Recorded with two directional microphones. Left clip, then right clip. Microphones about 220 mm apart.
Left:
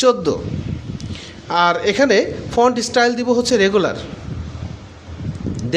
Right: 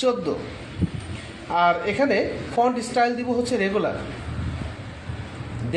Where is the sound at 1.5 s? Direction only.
50° left (ahead or behind).